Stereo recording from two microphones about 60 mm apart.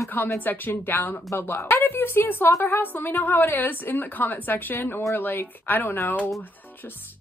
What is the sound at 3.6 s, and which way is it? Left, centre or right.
A woman's voice, left.